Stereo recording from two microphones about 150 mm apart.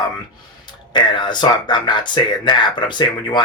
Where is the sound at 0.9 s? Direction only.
30° left (ahead or behind).